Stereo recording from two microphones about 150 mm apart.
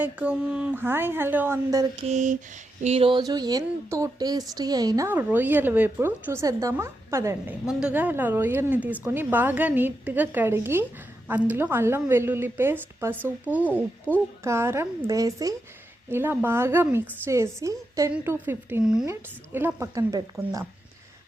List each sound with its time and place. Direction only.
0.0 s speech: 10° right (ahead or behind)
1.7 s speech: 25° right (ahead or behind)
2.0 s a sound: 55° right (ahead or behind)
2.8 s speech: 40° right (ahead or behind); by 7.5 s 20° right (ahead or behind)
7.7 s speech: 5° right (ahead or behind)
14.1 s speech: 10° left (ahead or behind)
14.4 s speech: 15° right (ahead or behind)